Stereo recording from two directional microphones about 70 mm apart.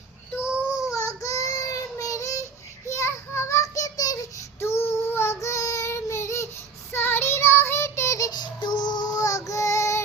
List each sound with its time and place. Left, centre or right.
0.4 s child singing: centre
0.9 s child singing: left
2.8 s a sound: left
4.6 s child singing: left
6.9 s child singing: left
8.3 s child singing: left